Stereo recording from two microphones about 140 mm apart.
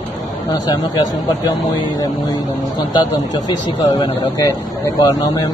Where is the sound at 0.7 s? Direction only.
30° left (ahead or behind).